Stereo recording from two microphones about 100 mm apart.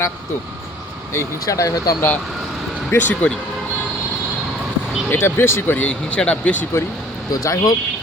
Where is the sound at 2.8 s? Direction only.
15° left (ahead or behind).